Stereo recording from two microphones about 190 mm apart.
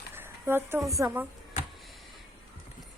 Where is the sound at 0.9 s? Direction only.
15° right (ahead or behind).